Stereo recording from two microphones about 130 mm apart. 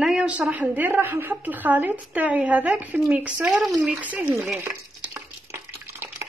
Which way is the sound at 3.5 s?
Centre (ahead or behind).